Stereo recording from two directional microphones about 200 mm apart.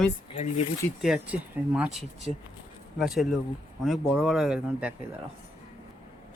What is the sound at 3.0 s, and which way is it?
Speech, centre (ahead or behind).